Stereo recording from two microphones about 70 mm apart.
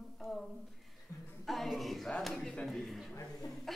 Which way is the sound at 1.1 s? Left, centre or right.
Left.